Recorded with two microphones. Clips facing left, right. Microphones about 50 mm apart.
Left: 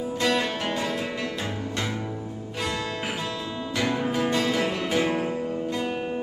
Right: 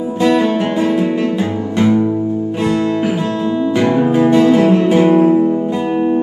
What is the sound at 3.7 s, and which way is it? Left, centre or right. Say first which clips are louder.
Music: right 11 dB; right.